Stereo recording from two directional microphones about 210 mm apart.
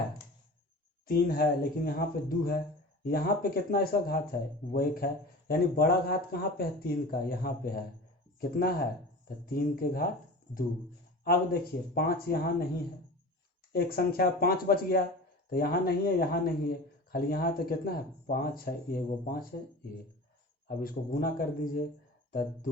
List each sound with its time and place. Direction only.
1.0 s speech: 45° left (ahead or behind)
11.3 s speech: 50° left (ahead or behind)
13.7 s speech: 45° left (ahead or behind)
20.7 s speech: 45° left (ahead or behind)